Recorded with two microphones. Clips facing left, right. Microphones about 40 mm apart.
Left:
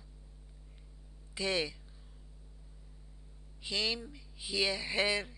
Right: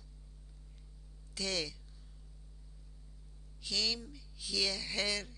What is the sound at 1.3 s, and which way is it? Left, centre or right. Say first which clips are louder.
Speech: left 4 dB; left.